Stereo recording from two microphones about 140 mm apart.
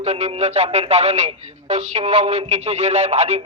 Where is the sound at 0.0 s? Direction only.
50° right (ahead or behind).